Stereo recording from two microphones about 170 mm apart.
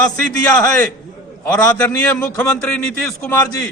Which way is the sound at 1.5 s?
10° left (ahead or behind).